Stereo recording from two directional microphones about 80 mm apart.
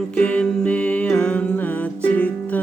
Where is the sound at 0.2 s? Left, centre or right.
Centre.